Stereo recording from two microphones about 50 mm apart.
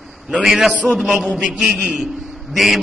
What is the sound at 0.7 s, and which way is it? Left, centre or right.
Speech, right.